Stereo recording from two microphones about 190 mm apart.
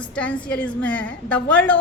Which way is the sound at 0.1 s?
5° left (ahead or behind).